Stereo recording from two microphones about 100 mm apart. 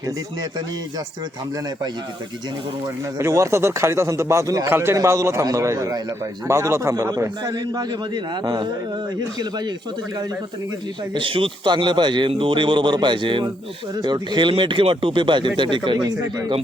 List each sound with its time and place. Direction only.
2.8 s a man's voice: 30° right (ahead or behind)
7.5 s speech: 45° right (ahead or behind)
11.1 s speech: 60° right (ahead or behind)
16.0 s a man's voice: 35° right (ahead or behind)